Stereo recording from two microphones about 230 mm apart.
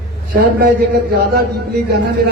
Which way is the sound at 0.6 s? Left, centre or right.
Right.